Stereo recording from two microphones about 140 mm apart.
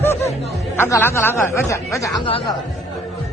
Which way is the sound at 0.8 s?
15° left (ahead or behind).